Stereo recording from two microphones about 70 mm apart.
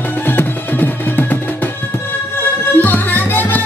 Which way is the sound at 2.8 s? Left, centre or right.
Left.